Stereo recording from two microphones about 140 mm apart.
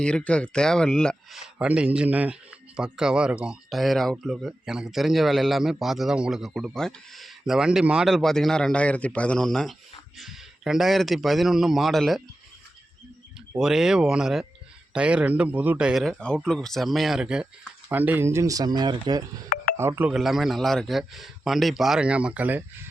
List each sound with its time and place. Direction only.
0.0 s speech: 5° left (ahead or behind)
1.4 s speech: 10° right (ahead or behind)
13.6 s speech: 5° right (ahead or behind); by 19.2 s 30° right (ahead or behind)
19.7 s speech: 15° right (ahead or behind)
20.1 s speech: centre (ahead or behind)